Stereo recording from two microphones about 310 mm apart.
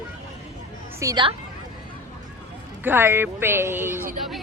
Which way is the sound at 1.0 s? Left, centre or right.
Centre.